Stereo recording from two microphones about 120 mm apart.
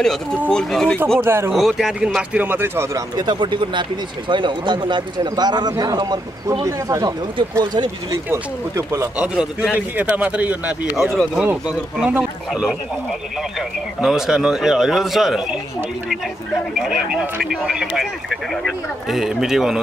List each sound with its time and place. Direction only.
0.5 s speech: 5° left (ahead or behind)
1.2 s speech: 20° right (ahead or behind)
1.5 s speech: centre (ahead or behind)
2.3 s speech: 15° right (ahead or behind)
3.2 s speech: 40° right (ahead or behind)
8.3 s speech: 25° right (ahead or behind)
9.2 s speech: 10° right (ahead or behind)